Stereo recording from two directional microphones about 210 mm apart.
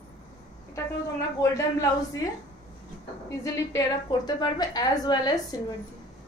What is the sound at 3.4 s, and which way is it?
A woman's voice, 15° left (ahead or behind).